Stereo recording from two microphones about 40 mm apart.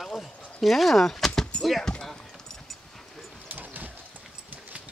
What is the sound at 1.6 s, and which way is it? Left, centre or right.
Speech, centre.